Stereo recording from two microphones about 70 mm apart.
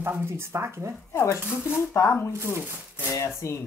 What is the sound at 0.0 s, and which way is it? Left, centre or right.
Speech, right.